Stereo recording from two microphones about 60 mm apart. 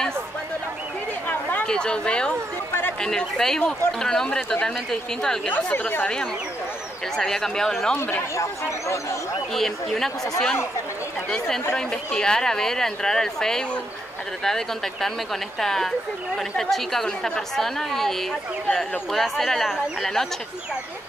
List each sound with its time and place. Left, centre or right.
1.7 s speech: centre
5.5 s a woman's voice: left
7.2 s speech: centre
8.4 s speech: left
9.5 s speech: centre